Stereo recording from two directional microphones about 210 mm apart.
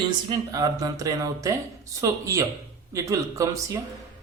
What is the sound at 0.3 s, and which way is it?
Speech, 15° right (ahead or behind).